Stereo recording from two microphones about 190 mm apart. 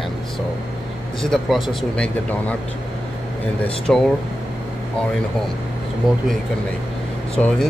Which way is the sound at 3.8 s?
5° left (ahead or behind).